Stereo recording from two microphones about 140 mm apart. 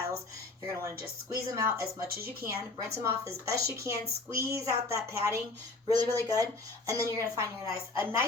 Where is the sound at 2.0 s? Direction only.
90° right.